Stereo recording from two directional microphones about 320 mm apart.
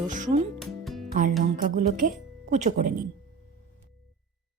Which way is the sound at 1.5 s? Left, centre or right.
Right.